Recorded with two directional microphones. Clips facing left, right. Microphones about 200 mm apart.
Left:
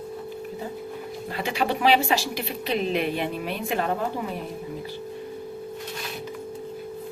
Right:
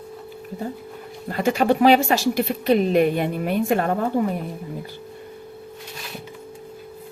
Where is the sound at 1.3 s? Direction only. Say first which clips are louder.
Right 7 dB; 45° right (ahead or behind).